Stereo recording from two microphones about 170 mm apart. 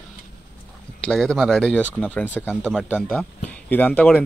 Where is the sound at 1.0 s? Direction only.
5° left (ahead or behind).